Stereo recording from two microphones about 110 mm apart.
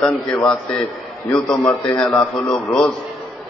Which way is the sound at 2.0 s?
10° left (ahead or behind).